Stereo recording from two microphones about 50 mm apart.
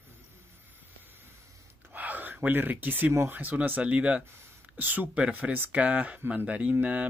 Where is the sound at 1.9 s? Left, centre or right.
Right.